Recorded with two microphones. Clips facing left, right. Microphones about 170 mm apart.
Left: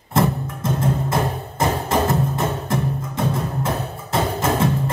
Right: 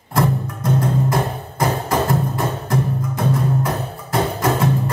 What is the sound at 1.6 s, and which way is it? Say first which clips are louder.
Music: even; 25° left (ahead or behind).